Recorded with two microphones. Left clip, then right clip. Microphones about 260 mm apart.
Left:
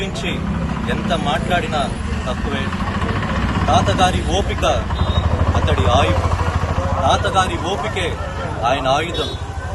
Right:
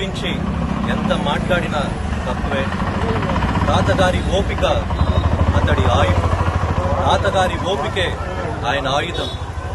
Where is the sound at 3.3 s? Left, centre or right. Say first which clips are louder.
Left 4 dB; right.